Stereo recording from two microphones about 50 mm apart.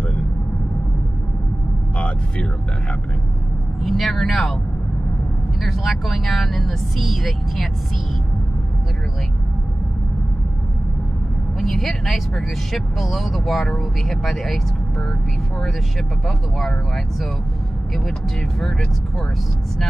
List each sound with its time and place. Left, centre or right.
2.0 s music: left
3.8 s speech: centre
5.6 s speech: centre
11.6 s speech: centre
16.3 s speech: centre